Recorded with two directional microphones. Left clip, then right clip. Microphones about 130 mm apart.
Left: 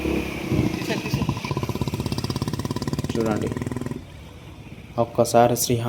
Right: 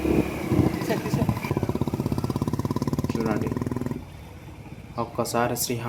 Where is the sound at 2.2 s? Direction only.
90° right; by 3.9 s 60° right (ahead or behind).